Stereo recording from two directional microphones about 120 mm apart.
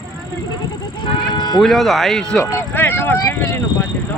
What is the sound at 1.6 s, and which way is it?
Speech, centre (ahead or behind).